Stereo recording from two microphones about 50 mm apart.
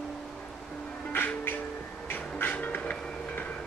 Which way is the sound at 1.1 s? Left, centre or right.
Left.